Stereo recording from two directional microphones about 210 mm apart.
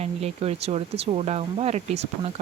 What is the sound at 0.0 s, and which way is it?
Speech, 30° right (ahead or behind).